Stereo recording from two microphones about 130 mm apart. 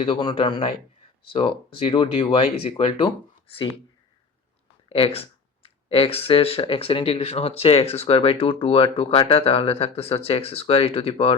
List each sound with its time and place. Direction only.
0.0 s speech: 40° left (ahead or behind)
4.9 s speech: 50° left (ahead or behind)